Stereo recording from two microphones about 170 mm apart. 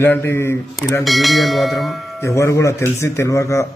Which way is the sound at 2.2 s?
15° left (ahead or behind).